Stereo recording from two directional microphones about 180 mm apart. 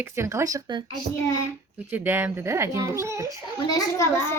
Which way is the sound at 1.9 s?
10° right (ahead or behind).